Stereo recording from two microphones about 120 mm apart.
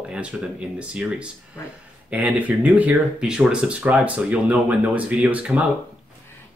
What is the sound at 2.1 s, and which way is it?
Speech, 10° right (ahead or behind).